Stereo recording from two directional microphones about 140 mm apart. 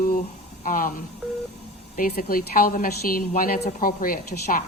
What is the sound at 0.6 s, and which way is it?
Speech, 80° left.